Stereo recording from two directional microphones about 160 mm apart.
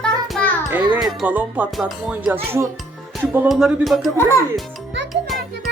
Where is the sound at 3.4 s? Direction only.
Centre (ahead or behind).